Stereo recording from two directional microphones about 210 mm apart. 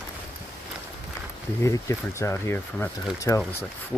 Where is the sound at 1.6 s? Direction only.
15° left (ahead or behind).